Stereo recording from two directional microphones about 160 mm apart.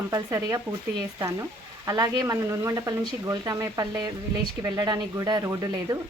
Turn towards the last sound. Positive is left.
turn(degrees=-20)  # may be behind; listen again after turning